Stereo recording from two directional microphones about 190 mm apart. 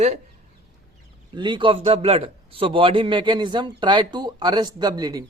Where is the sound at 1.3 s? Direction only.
25° right (ahead or behind).